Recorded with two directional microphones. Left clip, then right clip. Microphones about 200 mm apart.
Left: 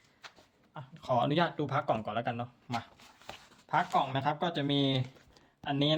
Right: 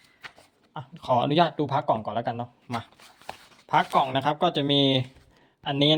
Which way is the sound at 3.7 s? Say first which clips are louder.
Right 7 dB; 35° right (ahead or behind).